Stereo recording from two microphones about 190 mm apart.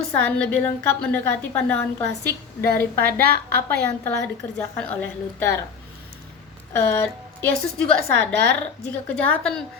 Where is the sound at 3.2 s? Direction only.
55° right (ahead or behind).